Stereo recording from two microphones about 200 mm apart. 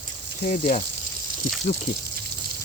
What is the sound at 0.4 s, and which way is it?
Speech, 40° left (ahead or behind).